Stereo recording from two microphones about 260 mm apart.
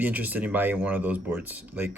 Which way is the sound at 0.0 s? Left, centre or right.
Centre.